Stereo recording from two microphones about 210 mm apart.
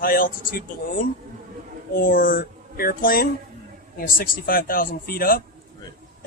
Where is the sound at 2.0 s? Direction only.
40° left (ahead or behind).